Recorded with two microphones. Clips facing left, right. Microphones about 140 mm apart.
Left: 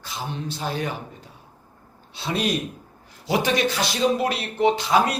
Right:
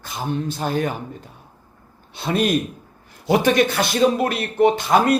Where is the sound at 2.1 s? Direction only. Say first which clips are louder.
Right 5 dB; 55° right (ahead or behind).